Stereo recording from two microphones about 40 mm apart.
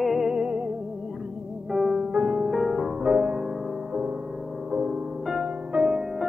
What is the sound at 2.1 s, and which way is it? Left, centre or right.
Music, right.